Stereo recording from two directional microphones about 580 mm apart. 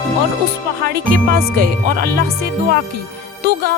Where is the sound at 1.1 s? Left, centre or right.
Centre.